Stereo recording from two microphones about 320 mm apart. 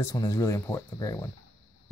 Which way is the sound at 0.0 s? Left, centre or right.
Centre.